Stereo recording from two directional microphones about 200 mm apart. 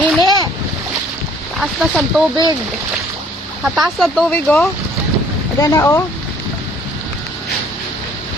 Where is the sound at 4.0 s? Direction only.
Centre (ahead or behind).